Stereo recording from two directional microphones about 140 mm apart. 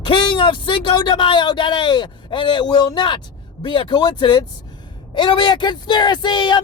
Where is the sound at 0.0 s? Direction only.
35° left (ahead or behind).